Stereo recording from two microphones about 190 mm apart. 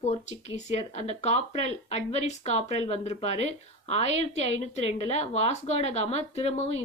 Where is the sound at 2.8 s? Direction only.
30° left (ahead or behind).